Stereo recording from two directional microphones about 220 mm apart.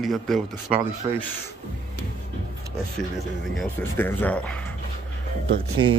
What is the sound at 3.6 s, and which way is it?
A man's voice, 10° left (ahead or behind).